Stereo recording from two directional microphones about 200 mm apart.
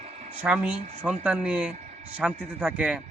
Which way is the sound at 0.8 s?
35° right (ahead or behind).